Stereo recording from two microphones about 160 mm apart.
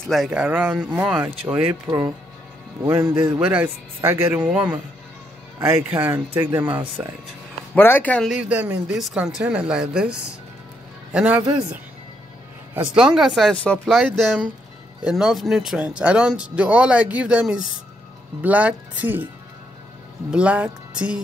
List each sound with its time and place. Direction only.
0.0 s speech: centre (ahead or behind)
1.9 s speech: 15° right (ahead or behind)
5.8 s speech: 10° right (ahead or behind)
7.7 s speech: 10° left (ahead or behind)
8.4 s speech: 10° right (ahead or behind)
12.9 s speech: 5° right (ahead or behind)
20.2 s speech: 5° right (ahead or behind)